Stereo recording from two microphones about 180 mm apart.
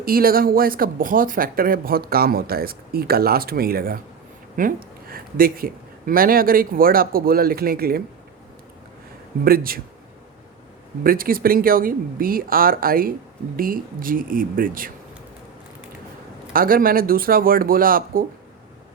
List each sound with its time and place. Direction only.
0.0 s speech: 55° right (ahead or behind)
9.4 s speech: 55° right (ahead or behind)
11.0 s speech: 55° right (ahead or behind)
16.5 s speech: 55° right (ahead or behind)